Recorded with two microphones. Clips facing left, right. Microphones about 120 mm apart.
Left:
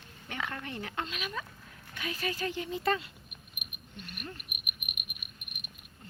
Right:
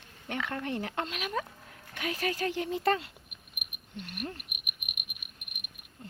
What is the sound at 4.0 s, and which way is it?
Cricket, 80° right.